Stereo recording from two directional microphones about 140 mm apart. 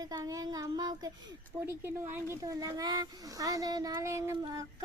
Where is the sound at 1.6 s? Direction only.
15° right (ahead or behind).